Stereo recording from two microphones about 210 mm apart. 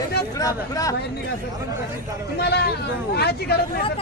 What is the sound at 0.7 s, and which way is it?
Speech, 15° left (ahead or behind).